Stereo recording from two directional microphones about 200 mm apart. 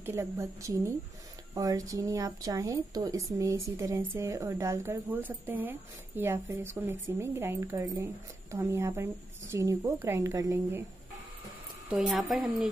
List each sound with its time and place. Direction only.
0.0 s a woman's voice: 15° right (ahead or behind)
11.9 s a woman's voice: centre (ahead or behind)